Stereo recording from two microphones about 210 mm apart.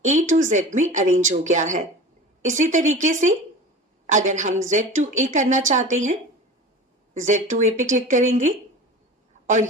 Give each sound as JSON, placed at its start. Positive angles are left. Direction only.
{"t": 0.0, "sound": "a woman's voice", "side_deg": -35}